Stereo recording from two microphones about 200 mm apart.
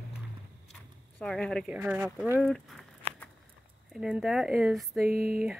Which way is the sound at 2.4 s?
Centre (ahead or behind).